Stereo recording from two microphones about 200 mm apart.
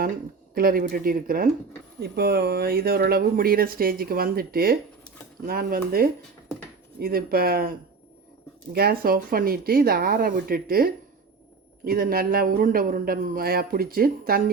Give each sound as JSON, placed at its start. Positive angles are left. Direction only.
{"t": 0.5, "sound": "speech", "side_deg": -45}
{"t": 8.7, "sound": "speech", "side_deg": -50}